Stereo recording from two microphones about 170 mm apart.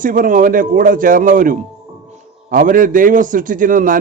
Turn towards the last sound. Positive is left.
turn(degrees=-50)  # may be behind; listen again after turning